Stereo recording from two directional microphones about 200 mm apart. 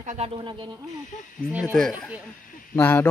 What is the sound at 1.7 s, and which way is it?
Speech, centre (ahead or behind).